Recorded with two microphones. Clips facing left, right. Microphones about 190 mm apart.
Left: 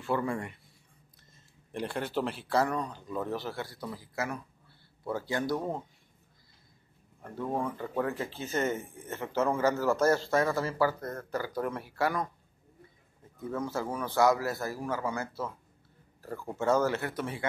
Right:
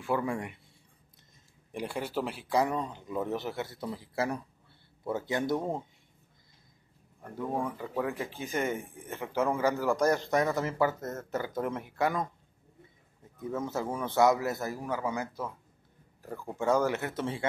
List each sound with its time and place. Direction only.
0.0 s speech: 10° right (ahead or behind)
1.7 s speech: 10° right (ahead or behind)
7.5 s speech: 10° right (ahead or behind)
13.4 s speech: 20° right (ahead or behind)